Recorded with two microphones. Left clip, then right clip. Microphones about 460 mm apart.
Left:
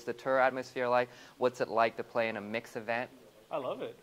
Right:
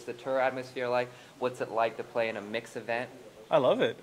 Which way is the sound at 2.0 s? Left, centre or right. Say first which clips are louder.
Right 2 dB; left.